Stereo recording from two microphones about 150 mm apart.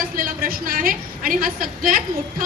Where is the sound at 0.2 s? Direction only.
70° right (ahead or behind).